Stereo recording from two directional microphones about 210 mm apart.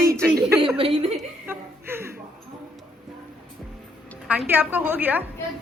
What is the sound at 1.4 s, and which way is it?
Chuckle, 10° right (ahead or behind).